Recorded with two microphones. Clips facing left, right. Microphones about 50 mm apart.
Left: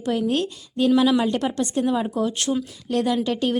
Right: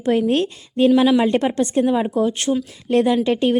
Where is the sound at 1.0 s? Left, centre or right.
Right.